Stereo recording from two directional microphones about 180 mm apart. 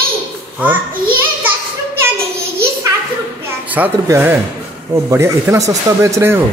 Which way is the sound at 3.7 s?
10° right (ahead or behind).